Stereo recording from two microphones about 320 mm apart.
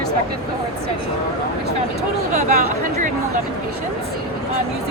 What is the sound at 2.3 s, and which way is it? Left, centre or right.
Speech, right.